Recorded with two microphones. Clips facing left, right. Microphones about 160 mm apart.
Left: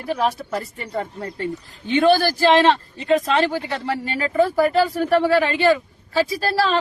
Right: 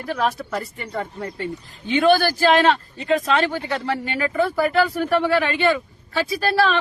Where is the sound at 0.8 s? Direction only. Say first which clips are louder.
Left 1 dB; 30° left (ahead or behind).